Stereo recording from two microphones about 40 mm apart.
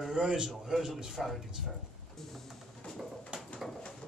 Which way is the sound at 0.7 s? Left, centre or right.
Centre.